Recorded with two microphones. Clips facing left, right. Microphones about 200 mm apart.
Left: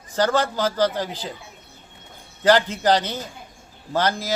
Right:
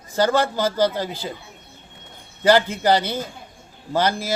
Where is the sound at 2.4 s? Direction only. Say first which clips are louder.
Right 1 dB; 10° right (ahead or behind).